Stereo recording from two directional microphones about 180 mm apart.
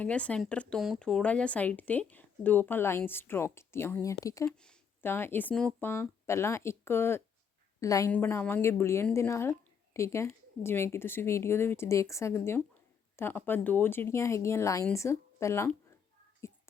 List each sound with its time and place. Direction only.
0.0 s speech: 5° left (ahead or behind)